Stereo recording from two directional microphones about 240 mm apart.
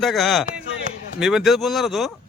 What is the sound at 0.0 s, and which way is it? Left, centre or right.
Speech, centre.